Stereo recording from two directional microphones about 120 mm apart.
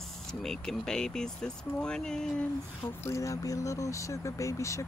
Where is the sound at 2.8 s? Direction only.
20° left (ahead or behind).